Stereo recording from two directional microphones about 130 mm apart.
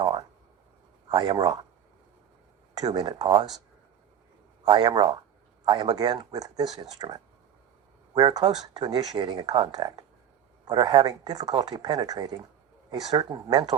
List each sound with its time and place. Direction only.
0.0 s a sound: 45° right (ahead or behind)
1.0 s speech: 40° right (ahead or behind)
2.7 s speech: 35° right (ahead or behind)
4.6 s speech: 35° right (ahead or behind)